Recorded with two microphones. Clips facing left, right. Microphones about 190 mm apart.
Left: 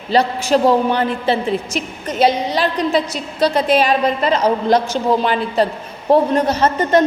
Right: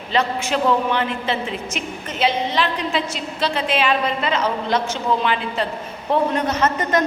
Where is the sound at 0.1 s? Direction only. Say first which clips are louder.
Left 6 dB; 35° left (ahead or behind).